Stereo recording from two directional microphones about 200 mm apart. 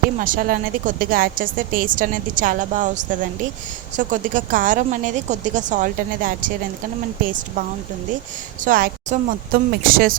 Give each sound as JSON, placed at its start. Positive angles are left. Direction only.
{"t": 0.2, "sound": "a woman's voice", "side_deg": -45}
{"t": 8.6, "sound": "a woman's voice", "side_deg": -45}